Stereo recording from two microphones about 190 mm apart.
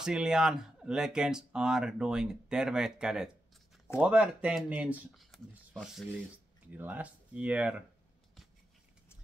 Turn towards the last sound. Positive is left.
turn(degrees=-5)  # may be behind; listen again after turning